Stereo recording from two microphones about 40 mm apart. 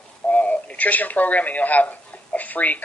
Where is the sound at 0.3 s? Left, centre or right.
Left.